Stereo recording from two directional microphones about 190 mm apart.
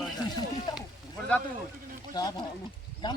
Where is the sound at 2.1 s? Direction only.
20° left (ahead or behind).